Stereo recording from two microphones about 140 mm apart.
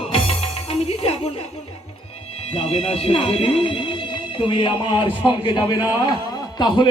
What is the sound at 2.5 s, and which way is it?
A man's voice, 45° left (ahead or behind).